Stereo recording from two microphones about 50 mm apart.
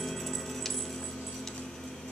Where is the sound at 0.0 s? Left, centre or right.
Centre.